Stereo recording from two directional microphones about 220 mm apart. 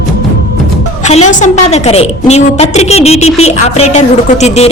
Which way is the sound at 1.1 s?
30° left (ahead or behind).